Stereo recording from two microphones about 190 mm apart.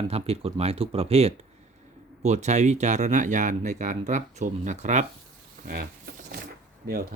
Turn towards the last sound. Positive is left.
turn(degrees=-50)  # may be behind; listen again after turning